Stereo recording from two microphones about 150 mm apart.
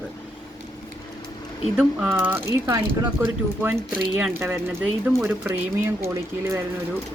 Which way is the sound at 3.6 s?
5° right (ahead or behind).